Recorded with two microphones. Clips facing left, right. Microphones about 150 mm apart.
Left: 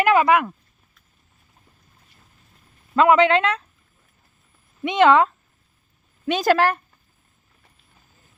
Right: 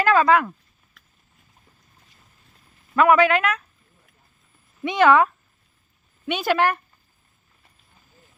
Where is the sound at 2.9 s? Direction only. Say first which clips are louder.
Left 1 dB; 25° left (ahead or behind).